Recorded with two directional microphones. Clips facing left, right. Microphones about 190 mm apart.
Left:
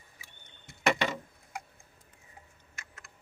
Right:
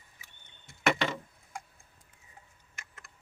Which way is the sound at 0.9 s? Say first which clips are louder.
Even; 15° left (ahead or behind).